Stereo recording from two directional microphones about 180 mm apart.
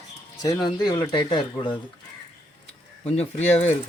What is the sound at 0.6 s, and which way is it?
Speech, 25° left (ahead or behind).